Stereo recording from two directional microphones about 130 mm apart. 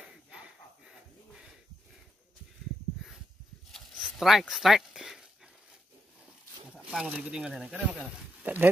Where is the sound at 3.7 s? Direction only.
Centre (ahead or behind).